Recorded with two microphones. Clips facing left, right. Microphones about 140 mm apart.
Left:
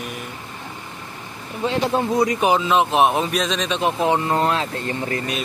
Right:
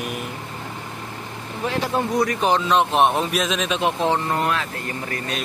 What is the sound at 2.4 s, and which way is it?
Speech, 5° left (ahead or behind).